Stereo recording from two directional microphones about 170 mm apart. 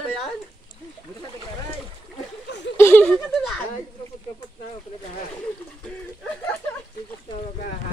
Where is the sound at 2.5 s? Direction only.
90° left.